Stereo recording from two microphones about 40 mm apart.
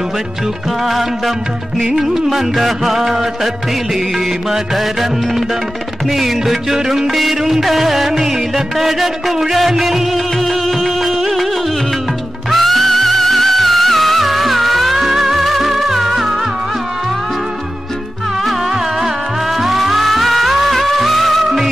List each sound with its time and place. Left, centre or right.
0.8 s music: centre
6.0 s music: centre
12.4 s music: centre
19.5 s music: centre